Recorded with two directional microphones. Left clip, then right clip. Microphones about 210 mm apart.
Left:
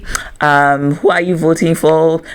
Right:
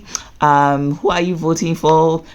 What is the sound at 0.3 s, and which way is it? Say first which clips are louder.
Speech: left 2 dB; 20° left (ahead or behind).